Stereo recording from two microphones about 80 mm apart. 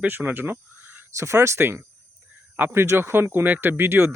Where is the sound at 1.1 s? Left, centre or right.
Right.